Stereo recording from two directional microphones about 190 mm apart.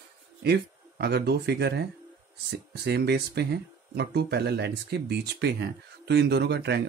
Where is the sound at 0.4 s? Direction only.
60° right (ahead or behind).